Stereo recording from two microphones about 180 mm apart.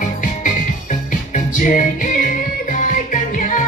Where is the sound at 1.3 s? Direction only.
45° left (ahead or behind).